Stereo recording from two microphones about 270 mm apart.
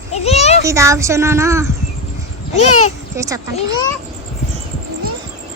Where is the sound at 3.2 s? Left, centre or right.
Centre.